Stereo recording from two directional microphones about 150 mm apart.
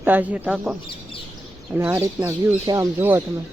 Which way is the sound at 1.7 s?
10° right (ahead or behind).